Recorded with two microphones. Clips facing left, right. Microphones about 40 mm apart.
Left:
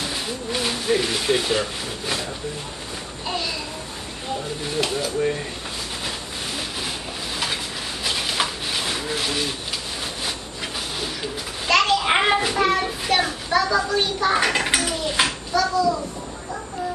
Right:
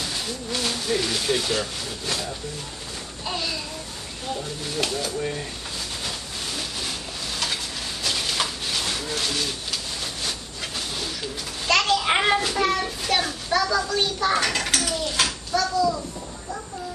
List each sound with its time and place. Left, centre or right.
0.0 s a child's voice: centre
8.0 s a sound: centre
11.6 s a child's voice: centre
15.5 s a child's voice: centre